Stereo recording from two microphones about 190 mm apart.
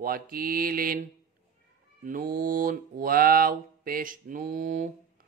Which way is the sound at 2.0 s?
45° right (ahead or behind).